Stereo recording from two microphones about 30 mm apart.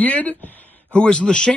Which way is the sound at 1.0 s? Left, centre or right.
Left.